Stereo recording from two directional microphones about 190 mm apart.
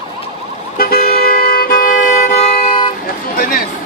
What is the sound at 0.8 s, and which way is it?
Vehicle, 50° left (ahead or behind).